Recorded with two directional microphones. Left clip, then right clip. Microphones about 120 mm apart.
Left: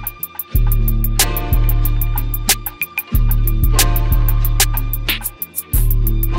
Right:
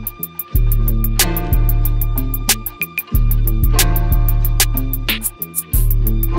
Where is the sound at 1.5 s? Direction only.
25° left (ahead or behind).